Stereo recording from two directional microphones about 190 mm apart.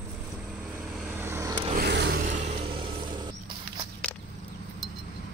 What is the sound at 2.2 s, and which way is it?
Vehicle, 35° right (ahead or behind).